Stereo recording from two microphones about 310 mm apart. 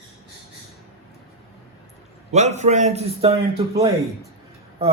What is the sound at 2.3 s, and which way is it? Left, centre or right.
A man's voice, right.